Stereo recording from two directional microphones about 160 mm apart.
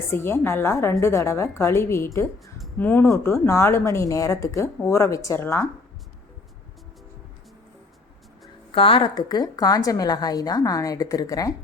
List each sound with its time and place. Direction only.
0.1 s speech: 15° left (ahead or behind)
8.7 s a woman's voice: 35° left (ahead or behind)